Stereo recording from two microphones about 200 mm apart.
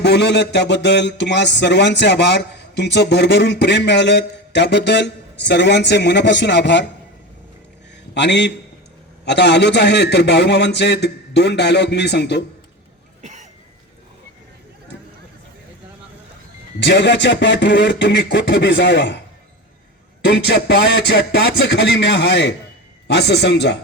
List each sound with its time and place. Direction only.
0.0 s speech: 60° left (ahead or behind)
8.1 s speech: 60° left (ahead or behind)
13.2 s cough: 35° right (ahead or behind)
16.8 s speech: 60° left (ahead or behind)
20.2 s speech: 55° left (ahead or behind)